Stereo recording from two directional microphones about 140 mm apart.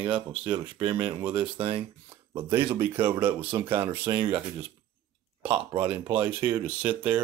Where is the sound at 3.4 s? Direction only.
40° right (ahead or behind).